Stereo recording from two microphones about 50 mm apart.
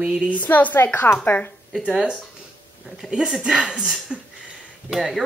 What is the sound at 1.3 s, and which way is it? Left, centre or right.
Speech, left.